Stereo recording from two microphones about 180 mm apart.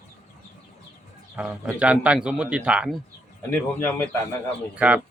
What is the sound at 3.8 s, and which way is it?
Speech, 15° left (ahead or behind).